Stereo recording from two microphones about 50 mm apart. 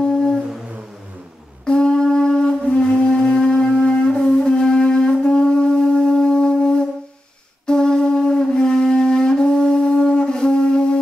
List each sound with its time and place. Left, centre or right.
0.0 s humming: centre
1.7 s wind instrument: centre